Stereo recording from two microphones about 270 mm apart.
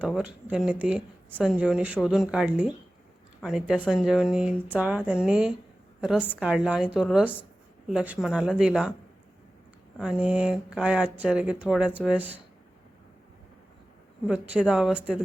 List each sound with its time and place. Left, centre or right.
0.0 s speech: centre
10.0 s speech: centre
14.3 s speech: centre